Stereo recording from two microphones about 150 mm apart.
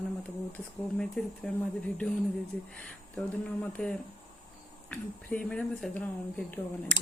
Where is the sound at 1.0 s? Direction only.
5° left (ahead or behind).